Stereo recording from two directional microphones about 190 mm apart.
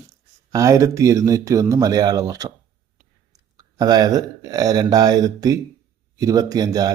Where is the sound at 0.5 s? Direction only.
15° right (ahead or behind).